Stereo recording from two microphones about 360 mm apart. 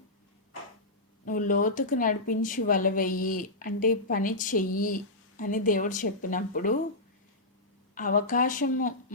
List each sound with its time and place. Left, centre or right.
1.2 s speech: left
7.9 s speech: left